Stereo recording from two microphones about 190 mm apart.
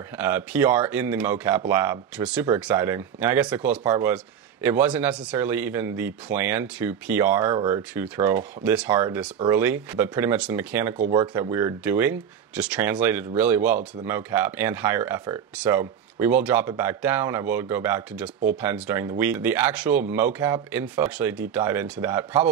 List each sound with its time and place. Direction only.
0.2 s a man's voice: 10° right (ahead or behind)